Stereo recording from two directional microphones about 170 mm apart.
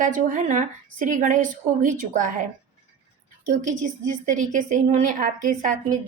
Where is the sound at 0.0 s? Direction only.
50° right (ahead or behind).